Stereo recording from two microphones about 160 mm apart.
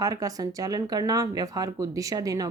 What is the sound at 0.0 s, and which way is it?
Speech, 20° right (ahead or behind).